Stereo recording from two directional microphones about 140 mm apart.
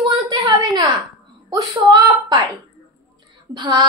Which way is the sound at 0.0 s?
35° right (ahead or behind).